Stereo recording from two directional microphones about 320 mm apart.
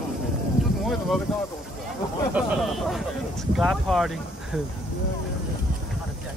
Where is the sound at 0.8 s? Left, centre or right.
Centre.